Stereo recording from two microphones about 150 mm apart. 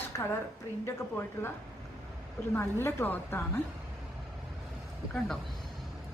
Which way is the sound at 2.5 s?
15° left (ahead or behind).